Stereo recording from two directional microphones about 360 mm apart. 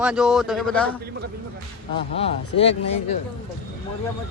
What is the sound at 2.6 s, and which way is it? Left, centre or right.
Speech, centre.